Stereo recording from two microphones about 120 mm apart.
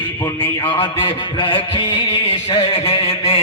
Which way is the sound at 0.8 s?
40° left (ahead or behind).